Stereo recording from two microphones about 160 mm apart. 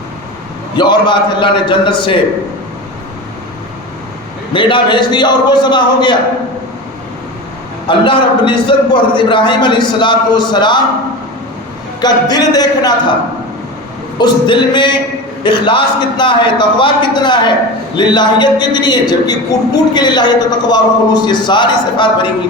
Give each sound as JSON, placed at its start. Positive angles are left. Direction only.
{"t": 0.8, "sound": "a man's voice", "side_deg": 30}
{"t": 4.5, "sound": "a man's voice", "side_deg": 30}
{"t": 7.9, "sound": "a man's voice", "side_deg": 30}
{"t": 11.9, "sound": "a man's voice", "side_deg": 25}
{"t": 14.2, "sound": "a man's voice", "side_deg": 30}